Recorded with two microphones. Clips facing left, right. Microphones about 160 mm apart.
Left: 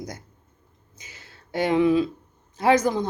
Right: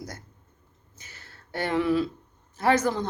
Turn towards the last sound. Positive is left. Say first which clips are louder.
# left 3 dB
turn(degrees=15)  # may be behind; listen again after turning